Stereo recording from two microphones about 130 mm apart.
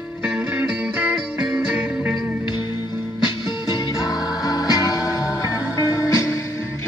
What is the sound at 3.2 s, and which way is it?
Music, 35° left (ahead or behind).